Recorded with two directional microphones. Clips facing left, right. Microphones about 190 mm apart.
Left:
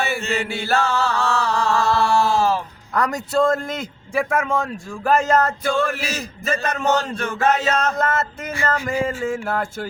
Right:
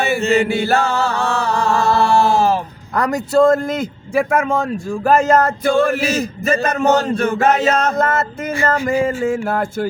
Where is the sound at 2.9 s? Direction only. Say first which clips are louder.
Right 5 dB; 35° right (ahead or behind).